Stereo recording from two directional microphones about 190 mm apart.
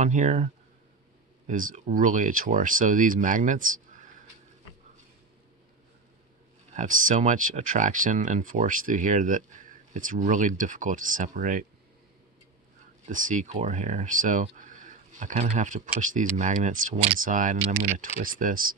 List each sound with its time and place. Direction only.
0.0 s speech: 40° right (ahead or behind)
1.5 s speech: 45° right (ahead or behind)
6.7 s speech: 40° right (ahead or behind)
13.0 s speech: 40° right (ahead or behind)